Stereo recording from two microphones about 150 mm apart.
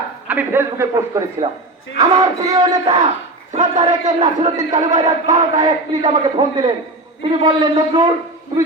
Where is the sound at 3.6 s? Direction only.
50° right (ahead or behind).